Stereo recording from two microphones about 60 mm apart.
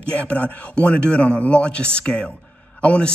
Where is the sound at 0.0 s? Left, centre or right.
Left.